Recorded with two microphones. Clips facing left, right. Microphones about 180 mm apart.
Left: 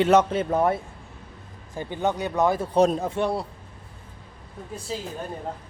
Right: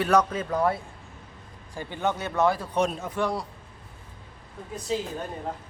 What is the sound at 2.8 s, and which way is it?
Speech, 35° left (ahead or behind).